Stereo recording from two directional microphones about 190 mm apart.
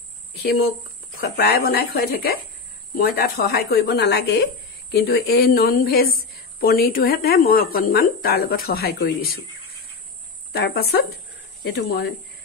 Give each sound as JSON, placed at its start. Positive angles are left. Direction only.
{"t": 1.1, "sound": "speech", "side_deg": 55}
{"t": 10.5, "sound": "speech", "side_deg": 55}